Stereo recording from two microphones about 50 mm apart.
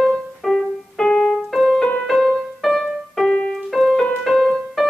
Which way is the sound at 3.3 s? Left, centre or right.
Centre.